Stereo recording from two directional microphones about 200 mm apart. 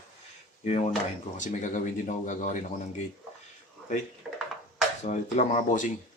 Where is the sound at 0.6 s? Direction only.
35° left (ahead or behind).